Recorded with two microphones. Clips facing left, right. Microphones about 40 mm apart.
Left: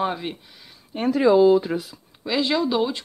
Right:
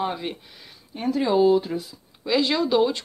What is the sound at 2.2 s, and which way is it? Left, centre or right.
Speech, centre.